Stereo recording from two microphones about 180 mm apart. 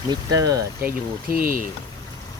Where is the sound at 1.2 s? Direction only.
50° right (ahead or behind).